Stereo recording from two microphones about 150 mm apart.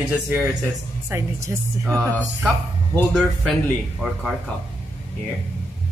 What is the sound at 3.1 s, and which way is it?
Speech, 5° right (ahead or behind).